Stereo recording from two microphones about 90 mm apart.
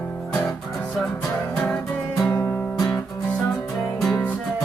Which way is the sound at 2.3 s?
25° left (ahead or behind).